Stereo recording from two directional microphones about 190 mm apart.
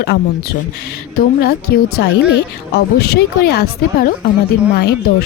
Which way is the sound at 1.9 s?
65° left (ahead or behind).